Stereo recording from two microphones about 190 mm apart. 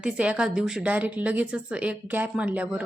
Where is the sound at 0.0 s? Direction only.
5° right (ahead or behind).